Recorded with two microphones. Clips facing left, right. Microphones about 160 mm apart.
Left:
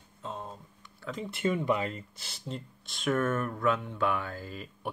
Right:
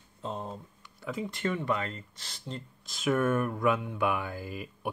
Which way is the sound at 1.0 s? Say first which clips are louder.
Right 2 dB; 10° right (ahead or behind).